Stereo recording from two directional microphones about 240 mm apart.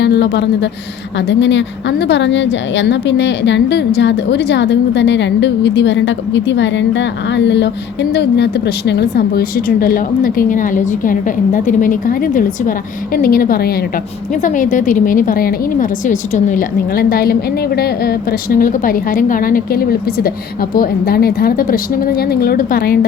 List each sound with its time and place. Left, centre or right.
0.0 s a woman's voice: left